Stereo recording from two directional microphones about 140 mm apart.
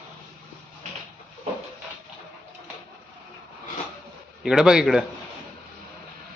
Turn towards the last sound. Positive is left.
turn(degrees=-5)  # may be behind; listen again after turning